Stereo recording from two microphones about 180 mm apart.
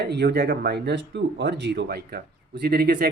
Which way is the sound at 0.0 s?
65° right (ahead or behind).